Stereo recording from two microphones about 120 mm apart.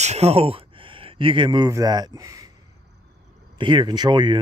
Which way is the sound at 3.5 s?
40° right (ahead or behind).